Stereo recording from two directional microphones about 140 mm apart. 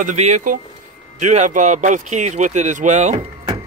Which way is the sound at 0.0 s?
55° right (ahead or behind).